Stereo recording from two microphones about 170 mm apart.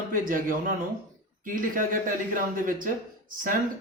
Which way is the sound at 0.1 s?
55° right (ahead or behind).